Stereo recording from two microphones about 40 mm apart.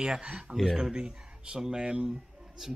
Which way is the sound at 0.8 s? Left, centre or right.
Right.